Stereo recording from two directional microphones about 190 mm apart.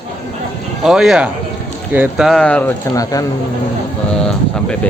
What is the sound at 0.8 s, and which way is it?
Speech, centre (ahead or behind).